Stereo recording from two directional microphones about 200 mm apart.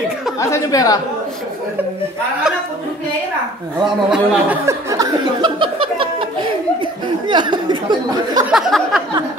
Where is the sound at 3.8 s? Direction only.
5° right (ahead or behind); by 8.4 s 20° right (ahead or behind).